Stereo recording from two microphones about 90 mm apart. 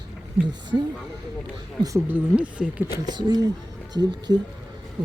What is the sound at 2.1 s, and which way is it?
Speech, 15° right (ahead or behind).